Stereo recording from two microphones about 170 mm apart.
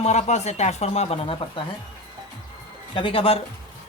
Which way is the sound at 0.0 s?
40° left (ahead or behind).